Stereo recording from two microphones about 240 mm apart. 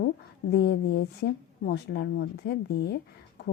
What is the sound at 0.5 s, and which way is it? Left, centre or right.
Speech, left.